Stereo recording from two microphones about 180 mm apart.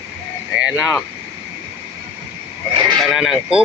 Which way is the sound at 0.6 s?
5° right (ahead or behind).